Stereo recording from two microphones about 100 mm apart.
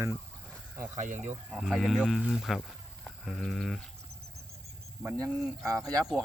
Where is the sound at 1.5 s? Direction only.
Centre (ahead or behind).